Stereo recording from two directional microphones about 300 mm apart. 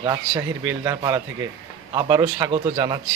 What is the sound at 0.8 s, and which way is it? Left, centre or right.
Speech, centre.